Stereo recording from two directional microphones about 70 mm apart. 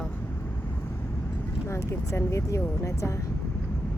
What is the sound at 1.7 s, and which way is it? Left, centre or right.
Speech, left.